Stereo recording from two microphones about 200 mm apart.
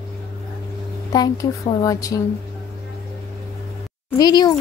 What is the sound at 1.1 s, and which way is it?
Speech, 20° left (ahead or behind).